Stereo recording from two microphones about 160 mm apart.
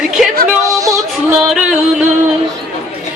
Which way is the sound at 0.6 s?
20° right (ahead or behind).